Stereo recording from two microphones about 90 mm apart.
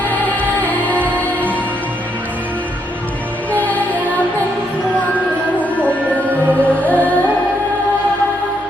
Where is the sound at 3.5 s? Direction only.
15° left (ahead or behind).